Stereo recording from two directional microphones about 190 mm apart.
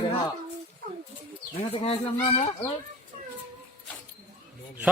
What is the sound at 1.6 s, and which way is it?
Speech, 30° left (ahead or behind).